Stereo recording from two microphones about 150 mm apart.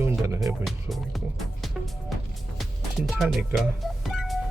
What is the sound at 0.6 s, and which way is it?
Speech, centre (ahead or behind).